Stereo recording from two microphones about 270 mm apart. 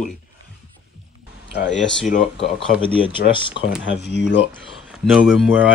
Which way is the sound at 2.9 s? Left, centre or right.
Centre.